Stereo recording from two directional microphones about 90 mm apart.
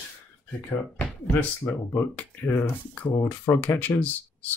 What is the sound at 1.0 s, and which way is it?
Speech, 15° left (ahead or behind).